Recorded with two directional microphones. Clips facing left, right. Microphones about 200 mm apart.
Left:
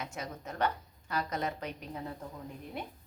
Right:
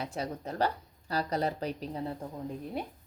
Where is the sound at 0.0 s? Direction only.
35° right (ahead or behind).